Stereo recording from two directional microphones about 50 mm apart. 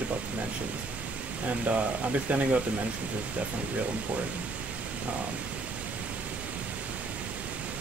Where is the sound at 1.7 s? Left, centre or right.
Right.